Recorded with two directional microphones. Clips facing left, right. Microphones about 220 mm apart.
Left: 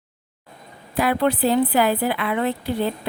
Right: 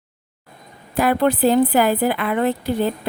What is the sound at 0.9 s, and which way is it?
A woman's voice, 45° right (ahead or behind).